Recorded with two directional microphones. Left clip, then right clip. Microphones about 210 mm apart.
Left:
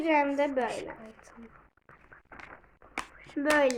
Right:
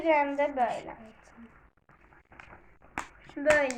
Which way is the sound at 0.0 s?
65° left (ahead or behind).